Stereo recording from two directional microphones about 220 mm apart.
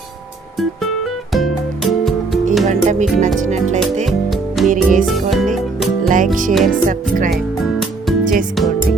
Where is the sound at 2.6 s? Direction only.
35° right (ahead or behind).